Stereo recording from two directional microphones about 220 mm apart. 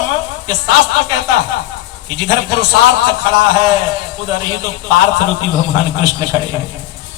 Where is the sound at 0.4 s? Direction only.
20° right (ahead or behind).